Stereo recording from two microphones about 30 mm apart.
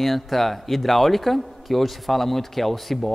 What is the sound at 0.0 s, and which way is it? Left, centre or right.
Speech, centre.